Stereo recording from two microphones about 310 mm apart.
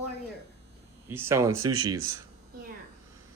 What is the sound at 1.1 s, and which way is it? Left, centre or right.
Speech, centre.